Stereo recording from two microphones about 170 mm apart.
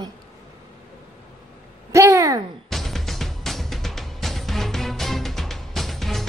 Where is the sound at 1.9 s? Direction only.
15° right (ahead or behind).